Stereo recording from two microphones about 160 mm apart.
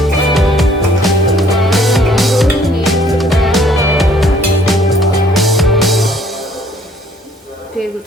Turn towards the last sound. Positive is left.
turn(degrees=0)  # may be behind; listen again after turning